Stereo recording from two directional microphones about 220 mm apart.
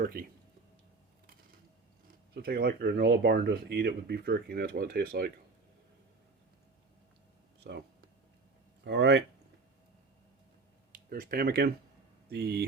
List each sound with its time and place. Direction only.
0.0 s speech: 45° right (ahead or behind)
2.3 s speech: 45° right (ahead or behind)
7.6 s speech: 50° right (ahead or behind)
11.1 s speech: 45° right (ahead or behind)